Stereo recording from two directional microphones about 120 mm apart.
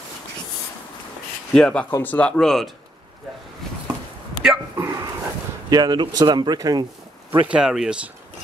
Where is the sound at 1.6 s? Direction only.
10° left (ahead or behind).